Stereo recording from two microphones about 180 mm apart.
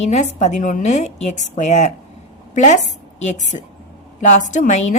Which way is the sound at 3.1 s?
40° left (ahead or behind).